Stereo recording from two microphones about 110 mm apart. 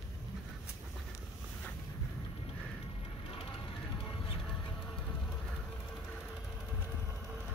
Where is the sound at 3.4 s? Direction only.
50° left (ahead or behind).